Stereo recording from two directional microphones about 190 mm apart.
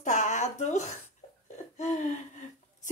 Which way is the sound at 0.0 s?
40° left (ahead or behind).